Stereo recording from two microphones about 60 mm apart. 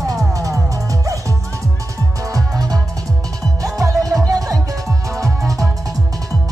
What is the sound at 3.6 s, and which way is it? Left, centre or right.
Music, right.